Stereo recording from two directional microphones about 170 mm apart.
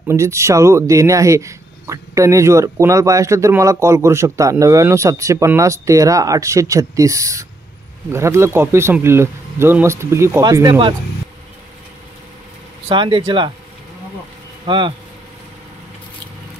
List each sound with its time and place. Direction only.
0.1 s speech: 15° right (ahead or behind)
12.8 s speech: 30° right (ahead or behind)
14.7 s speech: 30° right (ahead or behind)